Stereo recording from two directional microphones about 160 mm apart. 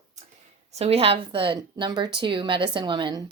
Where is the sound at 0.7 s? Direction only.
40° right (ahead or behind).